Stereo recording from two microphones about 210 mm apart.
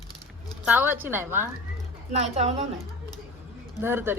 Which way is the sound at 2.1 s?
30° right (ahead or behind).